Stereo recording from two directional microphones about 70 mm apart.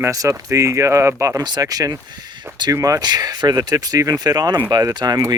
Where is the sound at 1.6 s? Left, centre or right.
Right.